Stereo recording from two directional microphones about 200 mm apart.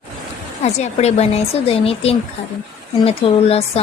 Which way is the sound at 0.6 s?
35° left (ahead or behind).